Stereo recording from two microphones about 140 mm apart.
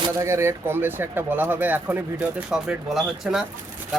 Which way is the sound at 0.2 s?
20° right (ahead or behind).